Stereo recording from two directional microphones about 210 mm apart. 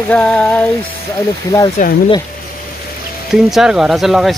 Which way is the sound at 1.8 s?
35° left (ahead or behind).